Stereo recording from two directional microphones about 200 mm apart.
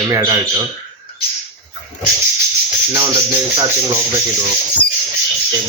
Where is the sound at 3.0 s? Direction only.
15° right (ahead or behind).